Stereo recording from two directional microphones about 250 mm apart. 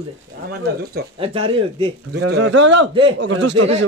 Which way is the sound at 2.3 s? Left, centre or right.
Right.